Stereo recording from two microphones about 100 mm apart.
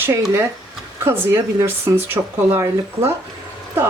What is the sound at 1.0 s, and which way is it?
A woman's voice, 25° right (ahead or behind).